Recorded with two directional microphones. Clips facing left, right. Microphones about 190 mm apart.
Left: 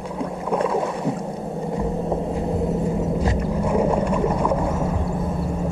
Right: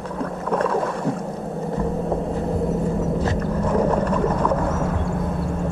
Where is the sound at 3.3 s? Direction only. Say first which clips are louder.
Even; 10° left (ahead or behind).